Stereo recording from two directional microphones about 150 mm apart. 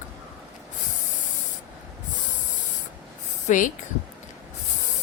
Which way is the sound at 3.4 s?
55° left (ahead or behind).